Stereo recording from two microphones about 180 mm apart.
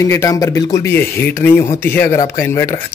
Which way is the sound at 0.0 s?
15° left (ahead or behind).